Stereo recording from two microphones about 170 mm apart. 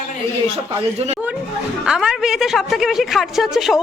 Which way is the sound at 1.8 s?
5° right (ahead or behind).